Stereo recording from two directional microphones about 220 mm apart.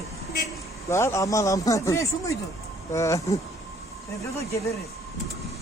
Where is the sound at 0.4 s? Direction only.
10° left (ahead or behind).